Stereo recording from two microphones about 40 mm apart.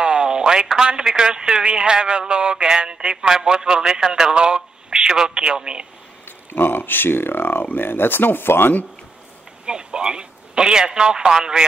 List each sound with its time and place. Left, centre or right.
0.0 s radio: right
0.8 s a man's voice: centre
6.2 s speech: left
9.7 s speech: right